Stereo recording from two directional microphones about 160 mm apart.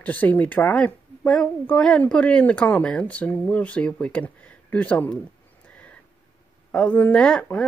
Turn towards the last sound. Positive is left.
turn(degrees=5)  # may be behind; listen again after turning